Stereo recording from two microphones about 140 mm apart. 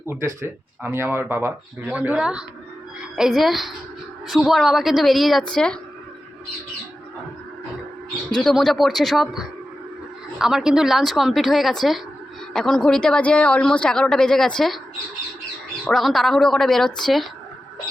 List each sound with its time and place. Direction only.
0.0 s speech: 15° right (ahead or behind); by 5.7 s 5° left (ahead or behind)
8.3 s speech: 5° left (ahead or behind)
15.9 s speech: centre (ahead or behind)